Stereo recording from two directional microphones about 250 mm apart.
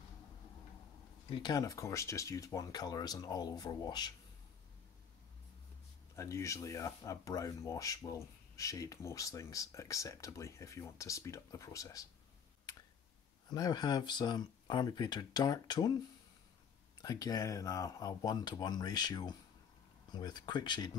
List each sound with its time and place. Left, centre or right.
1.3 s speech: centre
6.1 s speech: centre
13.5 s speech: centre
17.0 s speech: centre